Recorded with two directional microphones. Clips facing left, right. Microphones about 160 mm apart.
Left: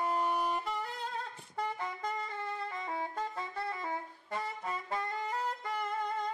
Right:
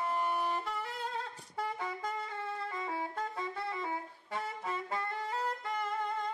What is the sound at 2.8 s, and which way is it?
Saxophone, 5° right (ahead or behind).